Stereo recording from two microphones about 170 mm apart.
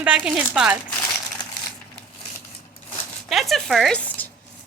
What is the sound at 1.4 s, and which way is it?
Crumpling, 25° left (ahead or behind).